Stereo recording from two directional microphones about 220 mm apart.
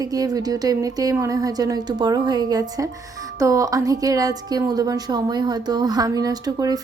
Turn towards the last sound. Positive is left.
turn(degrees=-15)  # may be behind; listen again after turning